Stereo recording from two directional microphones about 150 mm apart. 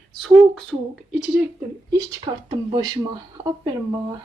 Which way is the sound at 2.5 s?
40° right (ahead or behind).